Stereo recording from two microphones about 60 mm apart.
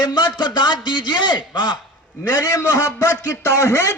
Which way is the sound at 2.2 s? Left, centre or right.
Left.